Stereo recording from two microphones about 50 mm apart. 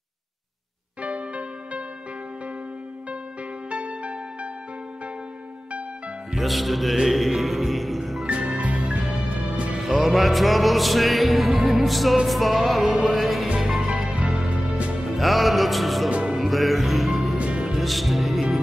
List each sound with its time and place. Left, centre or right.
1.0 s music: right
3.7 s music: right
6.4 s music: centre
8.3 s music: right
9.8 s music: centre
13.7 s music: centre
15.0 s music: centre
17.4 s music: right
17.7 s music: centre